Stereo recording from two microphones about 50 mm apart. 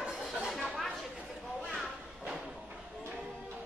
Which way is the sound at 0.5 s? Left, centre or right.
Centre.